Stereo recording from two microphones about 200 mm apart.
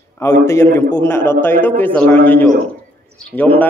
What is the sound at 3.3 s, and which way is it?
Speech, 10° right (ahead or behind).